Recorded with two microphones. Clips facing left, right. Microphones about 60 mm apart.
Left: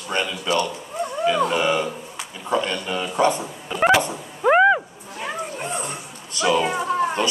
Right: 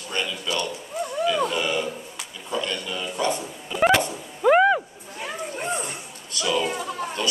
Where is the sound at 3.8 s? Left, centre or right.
Centre.